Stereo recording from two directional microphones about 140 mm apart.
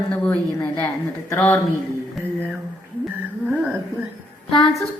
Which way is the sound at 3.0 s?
10° right (ahead or behind).